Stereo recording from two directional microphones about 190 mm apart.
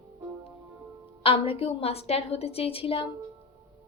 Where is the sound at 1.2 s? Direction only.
30° left (ahead or behind).